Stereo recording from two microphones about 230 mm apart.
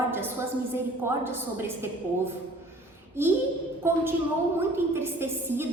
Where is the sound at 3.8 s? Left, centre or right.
Centre.